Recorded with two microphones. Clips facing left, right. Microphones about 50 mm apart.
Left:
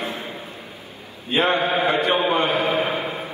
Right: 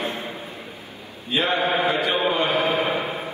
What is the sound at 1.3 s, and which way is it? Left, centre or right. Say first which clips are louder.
A man's voice: left 2 dB; left.